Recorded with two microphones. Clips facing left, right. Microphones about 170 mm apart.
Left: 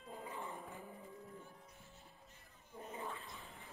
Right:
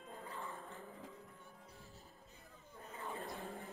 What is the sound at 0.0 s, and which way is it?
Dog, 5° left (ahead or behind).